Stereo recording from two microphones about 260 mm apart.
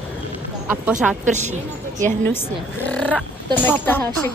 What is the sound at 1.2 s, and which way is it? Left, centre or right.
Speech, right.